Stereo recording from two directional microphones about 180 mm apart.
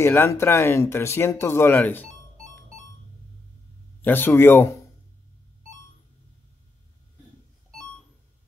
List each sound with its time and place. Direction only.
0.0 s speech: 15° left (ahead or behind)
4.0 s speech: 10° left (ahead or behind)